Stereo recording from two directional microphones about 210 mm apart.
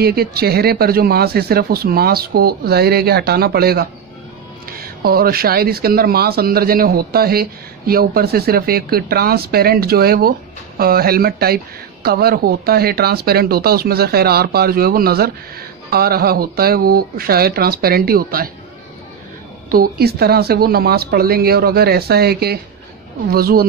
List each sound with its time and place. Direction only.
0.0 s speech: 50° right (ahead or behind)
19.7 s speech: 45° right (ahead or behind)